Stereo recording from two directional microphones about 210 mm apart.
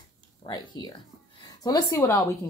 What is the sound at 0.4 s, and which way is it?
A woman's voice, 20° left (ahead or behind).